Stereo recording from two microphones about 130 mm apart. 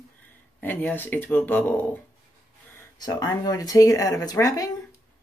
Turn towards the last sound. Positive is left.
turn(degrees=25)  # may be behind; listen again after turning